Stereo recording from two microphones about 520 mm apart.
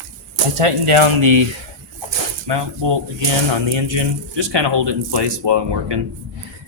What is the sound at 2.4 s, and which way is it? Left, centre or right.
Speech, right.